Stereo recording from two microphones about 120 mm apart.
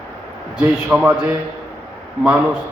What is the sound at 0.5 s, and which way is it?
Speech, 10° right (ahead or behind).